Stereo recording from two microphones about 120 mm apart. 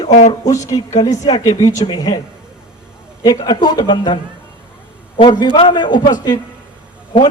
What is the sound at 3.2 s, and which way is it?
Speech, 30° left (ahead or behind).